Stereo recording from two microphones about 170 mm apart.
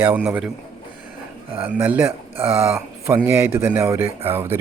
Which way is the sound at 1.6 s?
10° right (ahead or behind).